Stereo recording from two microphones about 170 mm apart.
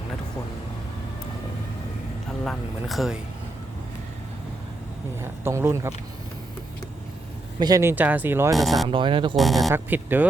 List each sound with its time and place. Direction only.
2.4 s speech: centre (ahead or behind)
5.2 s speech: 15° right (ahead or behind)
7.6 s speech: 20° right (ahead or behind)
8.5 s speech: centre (ahead or behind)
8.9 s speech: 30° right (ahead or behind)
9.3 s speech: centre (ahead or behind)
9.7 s speech: 10° right (ahead or behind)